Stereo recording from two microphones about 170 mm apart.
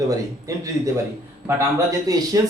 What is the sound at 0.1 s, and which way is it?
Speech, 20° right (ahead or behind).